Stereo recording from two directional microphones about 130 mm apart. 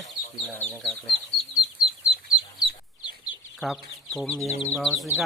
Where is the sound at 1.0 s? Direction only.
Centre (ahead or behind).